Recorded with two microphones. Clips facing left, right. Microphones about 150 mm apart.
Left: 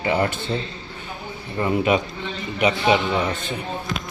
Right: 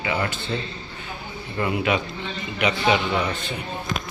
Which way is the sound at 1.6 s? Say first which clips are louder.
Left 3 dB; 40° left (ahead or behind).